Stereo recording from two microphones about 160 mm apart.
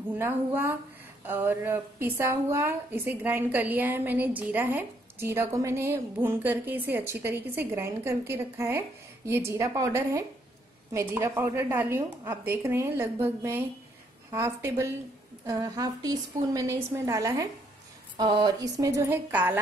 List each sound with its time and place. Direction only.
0.2 s a woman's voice: 15° right (ahead or behind)